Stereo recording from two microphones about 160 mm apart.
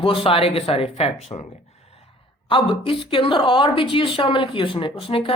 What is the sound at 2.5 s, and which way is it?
A woman's voice, 35° left (ahead or behind).